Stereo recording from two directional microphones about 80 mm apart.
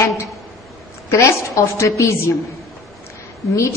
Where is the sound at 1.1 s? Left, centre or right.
Left.